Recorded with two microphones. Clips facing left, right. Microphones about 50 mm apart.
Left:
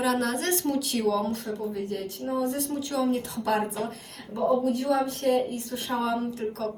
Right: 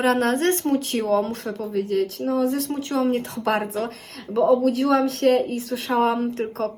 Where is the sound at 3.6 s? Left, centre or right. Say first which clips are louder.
Right 3 dB; right.